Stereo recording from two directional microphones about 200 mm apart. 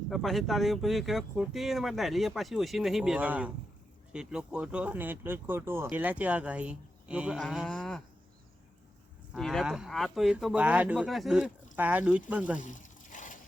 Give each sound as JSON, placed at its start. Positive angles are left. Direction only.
{"t": 0.1, "sound": "speech", "side_deg": 0}
{"t": 9.3, "sound": "speech", "side_deg": 0}
{"t": 12.5, "sound": "a sound", "side_deg": 40}